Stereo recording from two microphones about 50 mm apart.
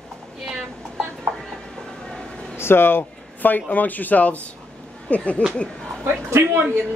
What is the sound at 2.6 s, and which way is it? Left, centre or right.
Speech, left.